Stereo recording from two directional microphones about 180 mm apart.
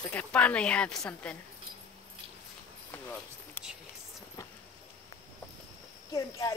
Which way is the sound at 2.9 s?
10° left (ahead or behind).